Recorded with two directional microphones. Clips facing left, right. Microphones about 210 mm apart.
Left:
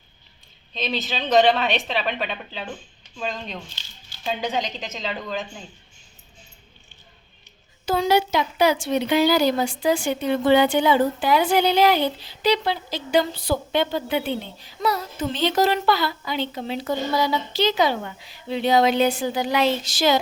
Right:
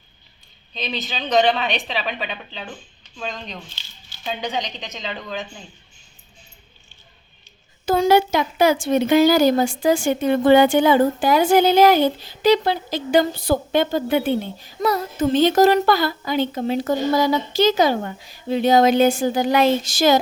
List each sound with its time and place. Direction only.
0.7 s speech: centre (ahead or behind)
7.9 s a woman's voice: 50° right (ahead or behind)